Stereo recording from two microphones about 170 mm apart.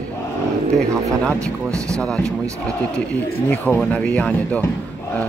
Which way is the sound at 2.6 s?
5° left (ahead or behind).